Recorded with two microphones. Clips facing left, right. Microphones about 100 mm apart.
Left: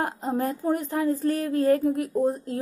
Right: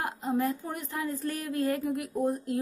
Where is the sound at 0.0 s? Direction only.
40° left (ahead or behind).